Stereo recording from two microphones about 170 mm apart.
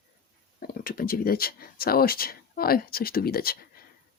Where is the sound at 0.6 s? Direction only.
60° left (ahead or behind).